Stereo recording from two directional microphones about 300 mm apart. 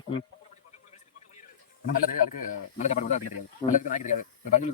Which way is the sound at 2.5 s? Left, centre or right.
Left.